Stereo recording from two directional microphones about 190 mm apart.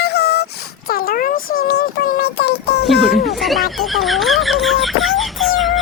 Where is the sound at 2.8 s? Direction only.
Centre (ahead or behind).